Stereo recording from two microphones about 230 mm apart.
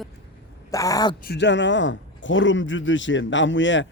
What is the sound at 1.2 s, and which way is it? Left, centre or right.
A man's voice, left.